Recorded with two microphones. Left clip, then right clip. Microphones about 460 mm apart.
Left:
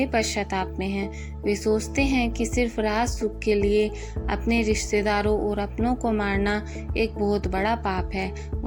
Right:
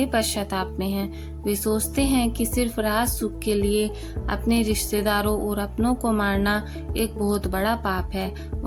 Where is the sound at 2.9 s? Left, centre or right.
Right.